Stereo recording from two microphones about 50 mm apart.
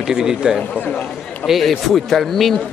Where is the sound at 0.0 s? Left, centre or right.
Centre.